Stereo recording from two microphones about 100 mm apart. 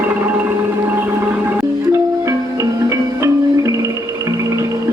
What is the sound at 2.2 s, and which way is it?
Music, 30° right (ahead or behind).